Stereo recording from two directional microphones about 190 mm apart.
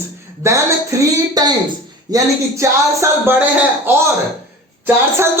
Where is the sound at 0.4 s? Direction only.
15° right (ahead or behind).